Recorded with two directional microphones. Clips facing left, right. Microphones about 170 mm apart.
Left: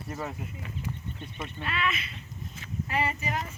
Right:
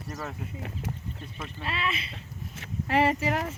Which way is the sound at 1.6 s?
30° right (ahead or behind).